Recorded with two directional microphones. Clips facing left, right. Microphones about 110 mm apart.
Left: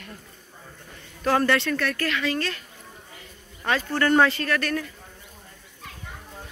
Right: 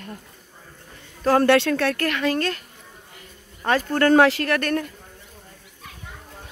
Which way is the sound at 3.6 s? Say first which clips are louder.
Right 4 dB; 45° right (ahead or behind).